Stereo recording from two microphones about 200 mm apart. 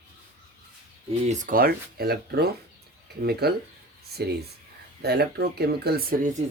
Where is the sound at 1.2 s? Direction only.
40° right (ahead or behind).